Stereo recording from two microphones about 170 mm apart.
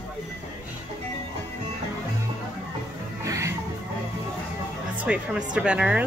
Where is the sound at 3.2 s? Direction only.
20° right (ahead or behind).